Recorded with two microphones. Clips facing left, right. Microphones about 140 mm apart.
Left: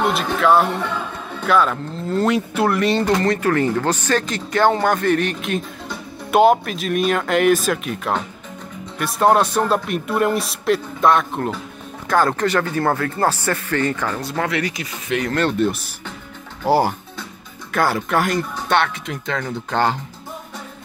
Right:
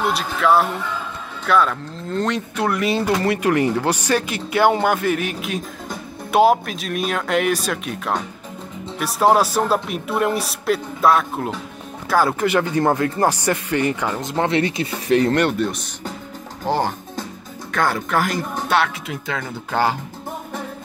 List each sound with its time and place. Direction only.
0.4 s a man's voice: centre (ahead or behind); by 15.3 s 30° right (ahead or behind)
15.5 s a man's voice: centre (ahead or behind)